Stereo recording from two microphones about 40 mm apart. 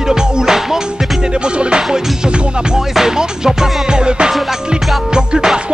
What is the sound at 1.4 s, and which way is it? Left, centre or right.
Music, right.